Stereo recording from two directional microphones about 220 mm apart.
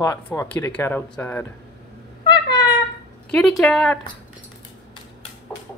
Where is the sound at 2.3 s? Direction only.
20° left (ahead or behind).